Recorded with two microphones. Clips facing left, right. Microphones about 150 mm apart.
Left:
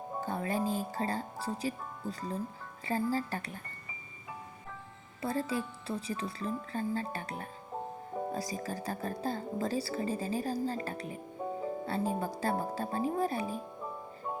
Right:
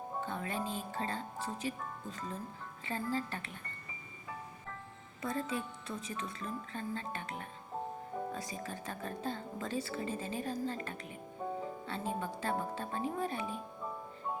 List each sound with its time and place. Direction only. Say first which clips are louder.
0.2 s music: left 6 dB; 35° left (ahead or behind)
1.6 s speech: left 3 dB; 35° left (ahead or behind)
5.2 s speech: left 4 dB; 35° left (ahead or behind)
11.4 s music: left 2 dB; 10° left (ahead or behind)
11.9 s speech: left 5 dB; 40° left (ahead or behind)